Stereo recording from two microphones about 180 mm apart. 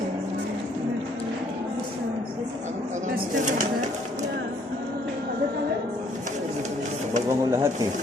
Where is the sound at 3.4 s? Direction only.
45° right (ahead or behind).